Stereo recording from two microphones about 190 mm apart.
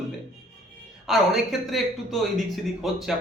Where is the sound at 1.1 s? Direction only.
Centre (ahead or behind).